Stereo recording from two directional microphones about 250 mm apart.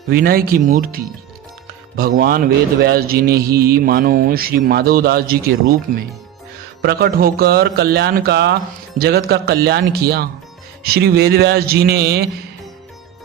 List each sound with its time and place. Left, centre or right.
0.1 s speech: right
6.8 s speech: right